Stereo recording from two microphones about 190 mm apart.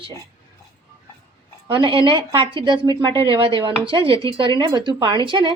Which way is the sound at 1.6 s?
25° right (ahead or behind).